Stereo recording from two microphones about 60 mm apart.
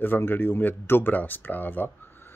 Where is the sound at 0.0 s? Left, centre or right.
Left.